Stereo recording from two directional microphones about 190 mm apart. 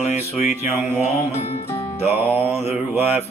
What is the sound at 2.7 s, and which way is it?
Music, 10° right (ahead or behind).